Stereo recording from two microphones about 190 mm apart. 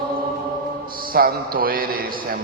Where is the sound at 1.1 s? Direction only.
50° right (ahead or behind).